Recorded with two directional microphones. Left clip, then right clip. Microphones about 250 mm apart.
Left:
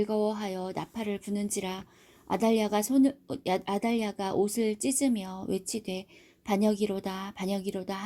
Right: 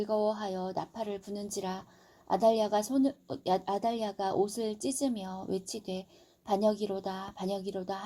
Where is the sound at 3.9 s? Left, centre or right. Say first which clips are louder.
Left 1 dB; left.